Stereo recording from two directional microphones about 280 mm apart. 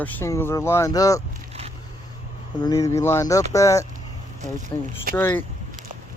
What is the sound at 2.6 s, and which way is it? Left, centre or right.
Speech, centre.